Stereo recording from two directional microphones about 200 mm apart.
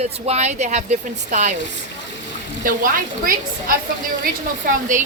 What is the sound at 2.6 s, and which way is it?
A woman's voice, 45° right (ahead or behind).